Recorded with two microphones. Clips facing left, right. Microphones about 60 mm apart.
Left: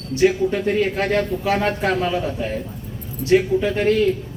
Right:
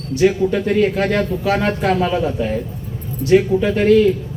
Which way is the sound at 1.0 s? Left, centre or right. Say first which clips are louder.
Right 2 dB; centre.